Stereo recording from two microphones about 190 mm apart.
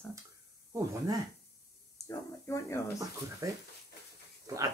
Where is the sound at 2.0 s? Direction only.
15° left (ahead or behind).